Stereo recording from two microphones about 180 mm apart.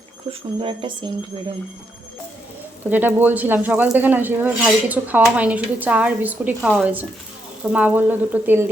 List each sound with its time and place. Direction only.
0.3 s speech: 30° right (ahead or behind)
2.8 s speech: 10° right (ahead or behind)